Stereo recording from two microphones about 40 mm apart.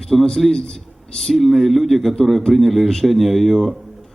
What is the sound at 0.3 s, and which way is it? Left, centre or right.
A man's voice, centre.